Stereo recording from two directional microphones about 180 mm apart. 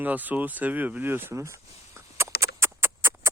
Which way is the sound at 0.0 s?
10° right (ahead or behind).